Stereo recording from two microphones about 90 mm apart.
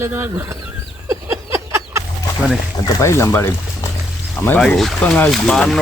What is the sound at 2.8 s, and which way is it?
Speech, 35° left (ahead or behind).